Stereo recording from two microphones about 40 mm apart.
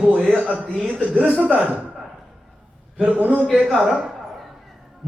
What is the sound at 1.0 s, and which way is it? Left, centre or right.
Speech, right.